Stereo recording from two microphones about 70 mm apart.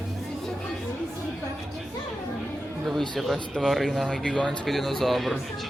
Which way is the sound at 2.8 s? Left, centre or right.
Centre.